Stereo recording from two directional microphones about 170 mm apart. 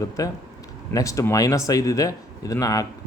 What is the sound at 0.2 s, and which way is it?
Speech, 20° left (ahead or behind).